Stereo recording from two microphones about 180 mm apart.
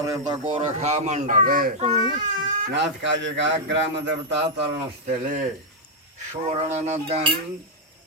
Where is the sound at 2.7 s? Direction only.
90° right.